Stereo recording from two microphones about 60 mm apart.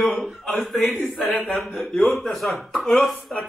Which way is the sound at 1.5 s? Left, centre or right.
Centre.